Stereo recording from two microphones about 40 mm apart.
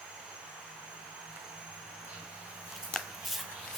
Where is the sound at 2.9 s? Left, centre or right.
Centre.